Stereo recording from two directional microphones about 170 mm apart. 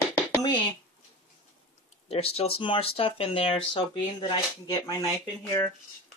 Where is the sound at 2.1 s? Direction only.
35° left (ahead or behind).